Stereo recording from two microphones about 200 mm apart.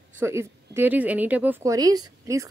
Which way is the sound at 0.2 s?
10° right (ahead or behind).